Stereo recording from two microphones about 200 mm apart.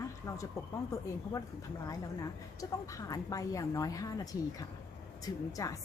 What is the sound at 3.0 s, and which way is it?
Speech, 15° left (ahead or behind).